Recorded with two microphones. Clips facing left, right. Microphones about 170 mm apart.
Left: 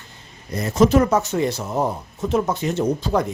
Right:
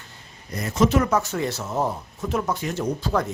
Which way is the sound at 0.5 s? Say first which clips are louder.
Left 4 dB; 30° left (ahead or behind).